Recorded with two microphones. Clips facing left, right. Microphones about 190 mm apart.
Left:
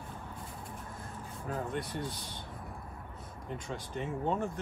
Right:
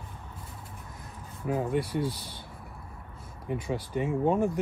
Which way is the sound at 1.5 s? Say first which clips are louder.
Right 8 dB; 10° right (ahead or behind).